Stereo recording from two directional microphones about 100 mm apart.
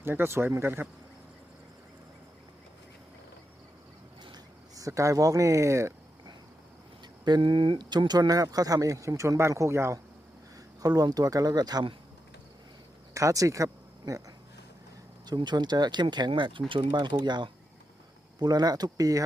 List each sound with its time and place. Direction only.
0.0 s speech: 25° right (ahead or behind)
4.7 s speech: 35° right (ahead or behind)
7.3 s speech: 50° right (ahead or behind); by 10.0 s 25° right (ahead or behind)
10.8 s speech: 40° right (ahead or behind)
13.1 s speech: 35° right (ahead or behind)
15.3 s speech: 45° right (ahead or behind)